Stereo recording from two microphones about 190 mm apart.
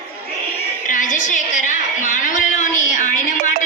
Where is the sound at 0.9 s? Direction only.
45° left (ahead or behind).